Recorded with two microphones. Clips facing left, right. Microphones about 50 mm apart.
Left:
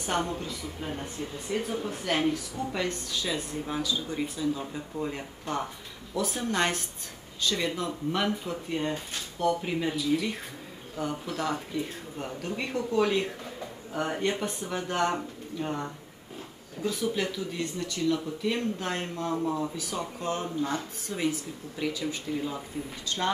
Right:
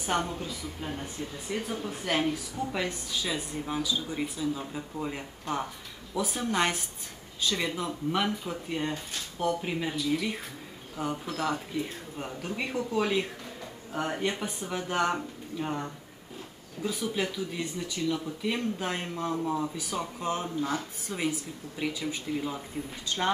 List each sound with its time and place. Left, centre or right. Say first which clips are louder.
0.0 s a woman's voice: even; centre